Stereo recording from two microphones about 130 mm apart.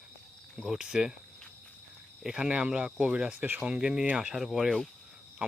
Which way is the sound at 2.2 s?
5° right (ahead or behind).